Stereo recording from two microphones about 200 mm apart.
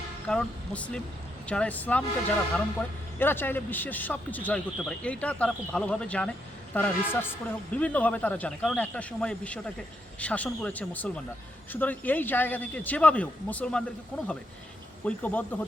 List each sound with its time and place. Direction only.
0.3 s a man's voice: 5° left (ahead or behind)
3.2 s a man's voice: 10° left (ahead or behind)